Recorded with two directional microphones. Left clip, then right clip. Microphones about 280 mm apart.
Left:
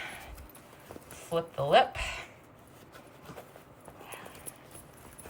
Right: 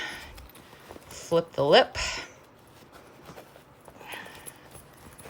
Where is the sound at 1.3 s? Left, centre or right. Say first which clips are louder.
Right 5 dB; centre.